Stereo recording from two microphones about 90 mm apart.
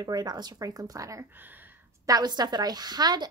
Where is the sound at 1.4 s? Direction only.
20° right (ahead or behind).